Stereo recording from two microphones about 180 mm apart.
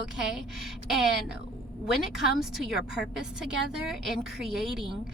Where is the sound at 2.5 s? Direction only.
Centre (ahead or behind).